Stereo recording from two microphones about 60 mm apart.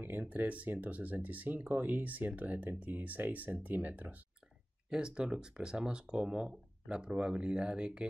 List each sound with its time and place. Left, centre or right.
0.0 s speech: right
4.8 s speech: centre